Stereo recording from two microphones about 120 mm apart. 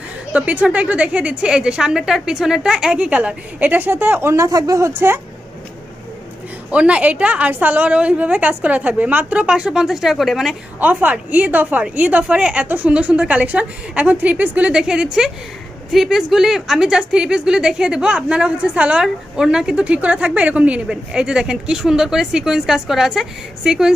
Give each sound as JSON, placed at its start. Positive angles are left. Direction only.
{"t": 0.3, "sound": "speech", "side_deg": -10}
{"t": 6.7, "sound": "speech", "side_deg": -10}
{"t": 10.8, "sound": "speech", "side_deg": -15}